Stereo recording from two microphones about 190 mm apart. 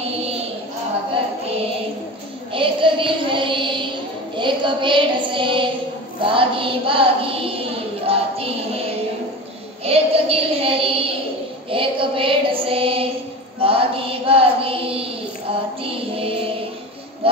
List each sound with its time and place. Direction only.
2.5 s child singing: 25° right (ahead or behind)
8.1 s music: 30° right (ahead or behind)
9.8 s child singing: 30° right (ahead or behind)
15.8 s music: 30° right (ahead or behind)
17.2 s a sound: 30° right (ahead or behind)